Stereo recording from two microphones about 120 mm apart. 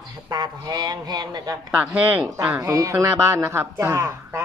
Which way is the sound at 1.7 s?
15° right (ahead or behind).